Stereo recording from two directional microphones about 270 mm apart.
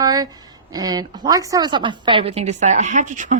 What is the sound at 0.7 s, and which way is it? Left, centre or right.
A woman's voice, centre.